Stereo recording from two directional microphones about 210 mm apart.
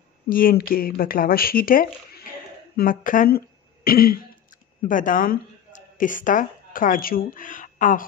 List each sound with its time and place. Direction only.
0.3 s speech: 45° left (ahead or behind)